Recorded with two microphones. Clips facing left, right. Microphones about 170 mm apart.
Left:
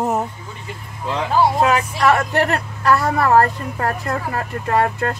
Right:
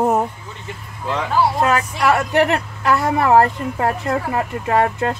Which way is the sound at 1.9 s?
10° right (ahead or behind).